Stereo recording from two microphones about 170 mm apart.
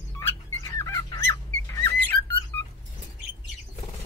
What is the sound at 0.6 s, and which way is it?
Fowl, 20° left (ahead or behind).